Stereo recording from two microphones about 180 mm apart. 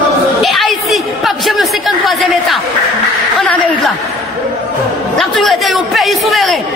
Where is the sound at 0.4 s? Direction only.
Centre (ahead or behind).